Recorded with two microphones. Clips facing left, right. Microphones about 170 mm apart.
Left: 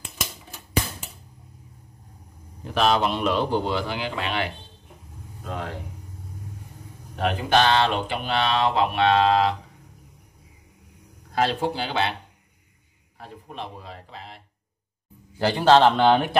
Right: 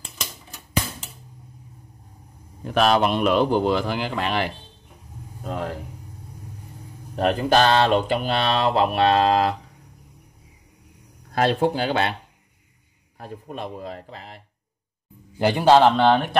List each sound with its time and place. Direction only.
2.6 s a man's voice: 55° right (ahead or behind)
7.2 s mantra: 40° right (ahead or behind)
11.3 s a man's voice: 55° right (ahead or behind)
13.2 s a man's voice: 45° right (ahead or behind)
15.3 s a man's voice: 15° right (ahead or behind)
15.8 s speech: centre (ahead or behind)